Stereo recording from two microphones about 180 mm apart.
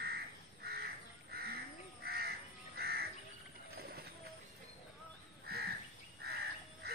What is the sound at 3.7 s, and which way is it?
Pigeon, 60° right (ahead or behind).